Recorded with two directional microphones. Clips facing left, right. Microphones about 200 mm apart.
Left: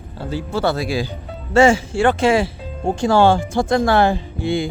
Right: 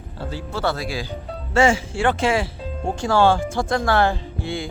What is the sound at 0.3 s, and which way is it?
Speech, 15° left (ahead or behind).